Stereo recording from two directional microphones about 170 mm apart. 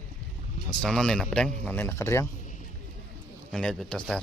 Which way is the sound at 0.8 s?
5° left (ahead or behind).